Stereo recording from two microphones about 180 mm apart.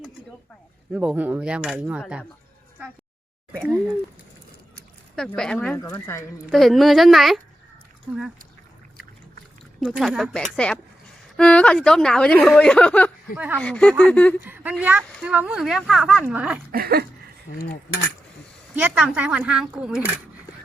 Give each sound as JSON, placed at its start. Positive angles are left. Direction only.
{"t": 0.9, "sound": "speech", "side_deg": -5}
{"t": 5.1, "sound": "speech", "side_deg": 5}
{"t": 6.5, "sound": "speech", "side_deg": 0}
{"t": 9.8, "sound": "speech", "side_deg": -5}
{"t": 13.3, "sound": "speech", "side_deg": -10}
{"t": 13.6, "sound": "speech", "side_deg": 5}
{"t": 14.4, "sound": "speech", "side_deg": -10}
{"t": 16.7, "sound": "a sound", "side_deg": -60}
{"t": 18.8, "sound": "speech", "side_deg": -5}